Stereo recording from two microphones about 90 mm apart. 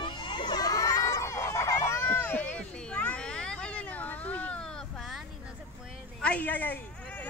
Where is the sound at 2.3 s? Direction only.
10° left (ahead or behind).